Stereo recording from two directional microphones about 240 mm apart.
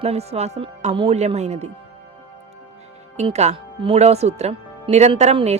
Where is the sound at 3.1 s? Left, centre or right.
Right.